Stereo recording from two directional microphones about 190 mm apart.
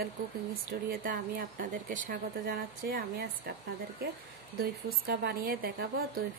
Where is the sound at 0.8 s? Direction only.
50° right (ahead or behind).